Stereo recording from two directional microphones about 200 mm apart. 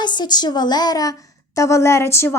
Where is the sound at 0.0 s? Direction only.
20° left (ahead or behind).